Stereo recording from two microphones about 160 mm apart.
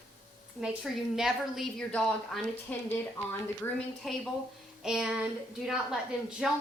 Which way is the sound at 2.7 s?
15° left (ahead or behind).